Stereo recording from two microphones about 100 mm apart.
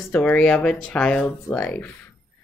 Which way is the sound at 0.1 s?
15° left (ahead or behind).